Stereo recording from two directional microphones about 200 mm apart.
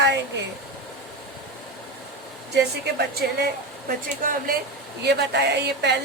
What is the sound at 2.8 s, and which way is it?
A woman's voice, 55° right (ahead or behind).